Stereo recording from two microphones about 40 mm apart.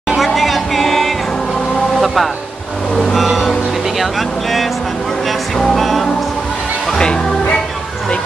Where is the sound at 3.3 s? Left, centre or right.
Centre.